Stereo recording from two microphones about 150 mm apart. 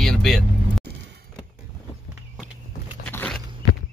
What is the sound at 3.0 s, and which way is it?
Biting, 5° left (ahead or behind).